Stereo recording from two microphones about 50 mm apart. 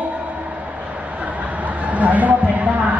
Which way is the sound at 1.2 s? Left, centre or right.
Right.